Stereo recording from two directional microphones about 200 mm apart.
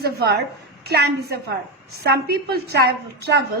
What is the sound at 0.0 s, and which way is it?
A woman's voice, 55° right (ahead or behind).